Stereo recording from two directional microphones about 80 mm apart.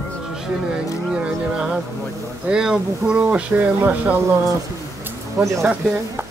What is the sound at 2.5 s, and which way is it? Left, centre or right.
Speech, centre.